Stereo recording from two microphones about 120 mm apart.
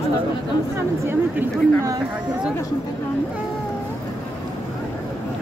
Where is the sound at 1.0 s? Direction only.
20° right (ahead or behind).